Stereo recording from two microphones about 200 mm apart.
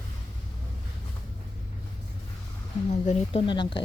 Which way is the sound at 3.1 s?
25° left (ahead or behind).